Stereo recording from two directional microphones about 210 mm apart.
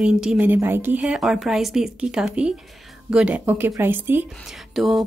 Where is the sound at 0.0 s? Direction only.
5° right (ahead or behind).